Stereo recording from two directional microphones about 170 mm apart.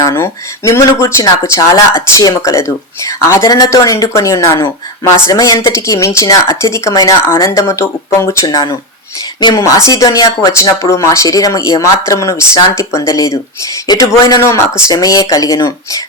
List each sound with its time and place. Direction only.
0.0 s speech: 20° left (ahead or behind)